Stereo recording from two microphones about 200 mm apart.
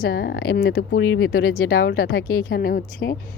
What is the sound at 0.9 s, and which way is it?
A woman's voice, 50° left (ahead or behind).